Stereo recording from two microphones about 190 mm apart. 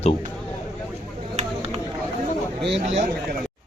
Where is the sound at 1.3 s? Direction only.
35° right (ahead or behind).